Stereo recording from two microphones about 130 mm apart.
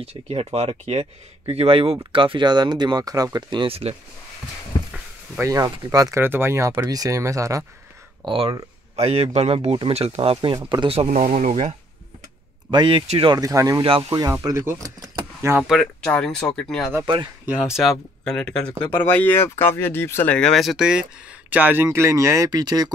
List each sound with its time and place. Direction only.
0.0 s speech: 50° right (ahead or behind)
5.4 s speech: 25° right (ahead or behind)
8.3 s speech: 45° right (ahead or behind)
11.0 s speech: 70° right (ahead or behind)
12.7 s speech: 40° right (ahead or behind)
13.0 s speech: 55° right (ahead or behind)
13.3 s speech: 25° right (ahead or behind)
13.8 s speech: 45° right (ahead or behind)
14.1 s speech: 30° right (ahead or behind)
15.6 s speech: centre (ahead or behind)
17.0 s speech: 35° right (ahead or behind)
17.5 s speech: 5° right (ahead or behind); by 22.9 s 30° right (ahead or behind)